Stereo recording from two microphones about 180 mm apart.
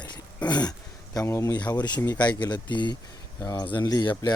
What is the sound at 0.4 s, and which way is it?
Speech, 25° left (ahead or behind).